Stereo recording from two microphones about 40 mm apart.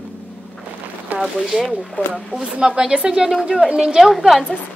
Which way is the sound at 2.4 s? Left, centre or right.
Centre.